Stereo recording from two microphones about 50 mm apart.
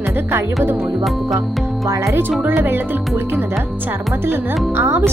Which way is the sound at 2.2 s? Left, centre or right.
Right.